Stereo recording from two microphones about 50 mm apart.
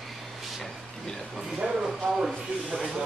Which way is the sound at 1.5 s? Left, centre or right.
Centre.